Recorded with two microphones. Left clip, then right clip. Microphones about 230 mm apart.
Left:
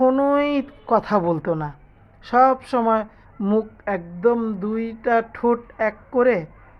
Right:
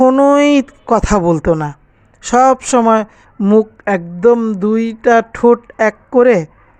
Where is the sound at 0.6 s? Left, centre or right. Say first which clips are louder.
Right 6 dB; right.